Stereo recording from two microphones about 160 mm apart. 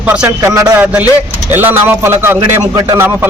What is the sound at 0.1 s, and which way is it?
A man's voice, 15° right (ahead or behind).